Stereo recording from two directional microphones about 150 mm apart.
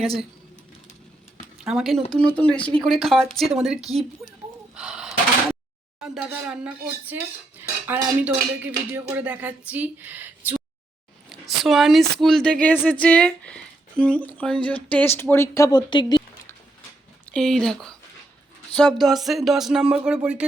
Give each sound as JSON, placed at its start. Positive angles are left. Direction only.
{"t": 1.6, "sound": "a woman's voice", "side_deg": 0}
{"t": 4.7, "sound": "a sound", "side_deg": -5}
{"t": 6.0, "sound": "speech", "side_deg": -5}
{"t": 11.3, "sound": "a woman's voice", "side_deg": 0}
{"t": 15.9, "sound": "a sound", "side_deg": 30}
{"t": 17.3, "sound": "a woman's voice", "side_deg": 5}